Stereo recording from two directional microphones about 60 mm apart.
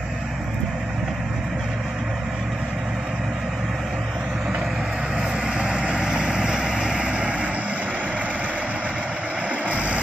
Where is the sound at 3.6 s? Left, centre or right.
Centre.